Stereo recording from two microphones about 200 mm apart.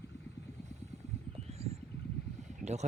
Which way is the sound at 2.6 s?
35° right (ahead or behind).